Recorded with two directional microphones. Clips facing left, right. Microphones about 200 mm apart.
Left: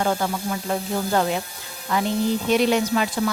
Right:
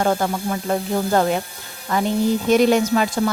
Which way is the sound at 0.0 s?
45° right (ahead or behind).